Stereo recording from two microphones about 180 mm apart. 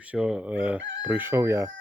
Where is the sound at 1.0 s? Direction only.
10° right (ahead or behind).